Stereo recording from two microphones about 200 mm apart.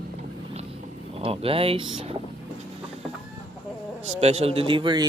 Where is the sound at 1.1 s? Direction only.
30° right (ahead or behind).